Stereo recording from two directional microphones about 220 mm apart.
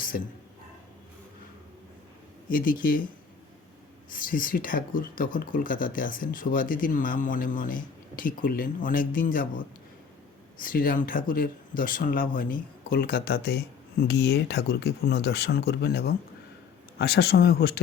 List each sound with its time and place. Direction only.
2.5 s speech: 40° left (ahead or behind)
4.1 s speech: 40° left (ahead or behind)
10.6 s speech: 40° left (ahead or behind)